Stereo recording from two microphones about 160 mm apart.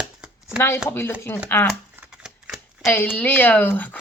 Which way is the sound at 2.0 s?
5° right (ahead or behind).